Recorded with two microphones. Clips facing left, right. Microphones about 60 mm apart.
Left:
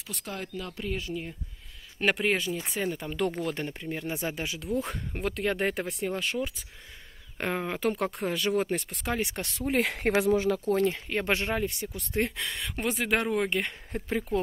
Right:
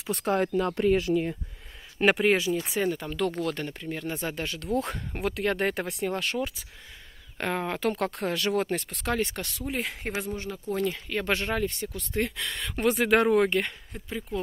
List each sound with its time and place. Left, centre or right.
0.1 s speech: right
2.0 s speech: centre
3.2 s speech: centre
9.3 s speech: left
9.8 s speech: left
10.7 s speech: left
11.8 s speech: centre
12.2 s speech: left
12.5 s speech: centre
14.0 s speech: left